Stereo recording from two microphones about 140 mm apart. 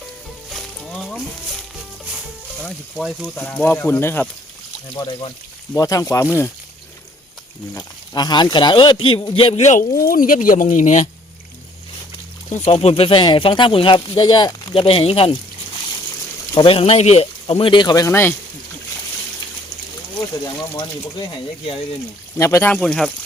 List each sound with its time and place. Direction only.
0.5 s music: centre (ahead or behind)
3.0 s speech: centre (ahead or behind)
3.8 s speech: 15° left (ahead or behind)
4.9 s speech: 35° left (ahead or behind)
5.7 s speech: 25° left (ahead or behind)
7.7 s speech: 25° left (ahead or behind)
9.6 s speech: 65° left (ahead or behind)
10.1 s speech: 85° left; by 11.1 s 60° left (ahead or behind)
12.5 s speech: 50° left (ahead or behind)
16.6 s speech: 40° left (ahead or behind)
17.5 s speech: 40° left (ahead or behind); by 18.3 s 15° left (ahead or behind)
20.7 s speech: 30° left (ahead or behind)
22.4 s speech: 20° left (ahead or behind)
22.7 s speech: 5° left (ahead or behind)